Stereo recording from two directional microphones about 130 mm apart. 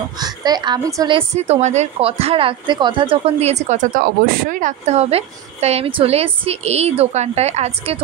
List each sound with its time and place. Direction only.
0.2 s a woman's voice: 30° right (ahead or behind)
1.3 s a woman's voice: 60° right (ahead or behind)